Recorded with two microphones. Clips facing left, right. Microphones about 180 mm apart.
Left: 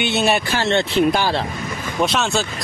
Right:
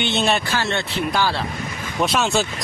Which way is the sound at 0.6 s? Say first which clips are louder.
Left 7 dB; 20° left (ahead or behind).